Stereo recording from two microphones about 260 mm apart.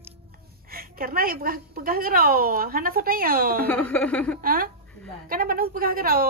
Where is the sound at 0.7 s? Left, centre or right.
Right.